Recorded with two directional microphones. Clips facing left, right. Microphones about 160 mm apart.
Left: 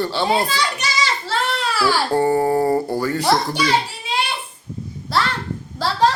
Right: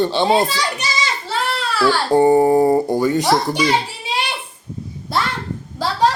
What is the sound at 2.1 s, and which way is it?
A child's voice, 15° right (ahead or behind).